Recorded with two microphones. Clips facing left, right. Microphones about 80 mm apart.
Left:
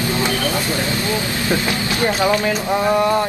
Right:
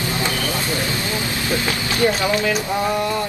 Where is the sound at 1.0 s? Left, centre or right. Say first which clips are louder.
Left 3 dB; left.